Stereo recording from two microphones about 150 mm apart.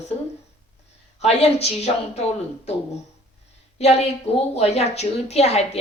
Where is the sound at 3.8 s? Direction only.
45° left (ahead or behind).